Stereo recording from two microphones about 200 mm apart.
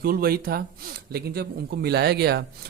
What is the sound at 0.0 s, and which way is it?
Speech, 45° right (ahead or behind).